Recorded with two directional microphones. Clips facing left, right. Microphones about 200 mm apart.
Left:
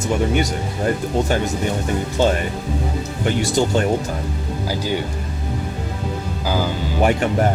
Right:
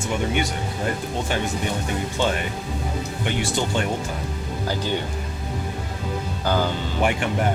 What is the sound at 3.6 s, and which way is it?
Speech, 40° left (ahead or behind).